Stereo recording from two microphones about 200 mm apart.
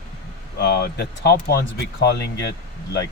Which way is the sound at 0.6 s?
60° left (ahead or behind).